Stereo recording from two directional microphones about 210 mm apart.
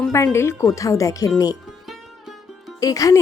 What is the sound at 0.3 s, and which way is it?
Speech, 15° left (ahead or behind).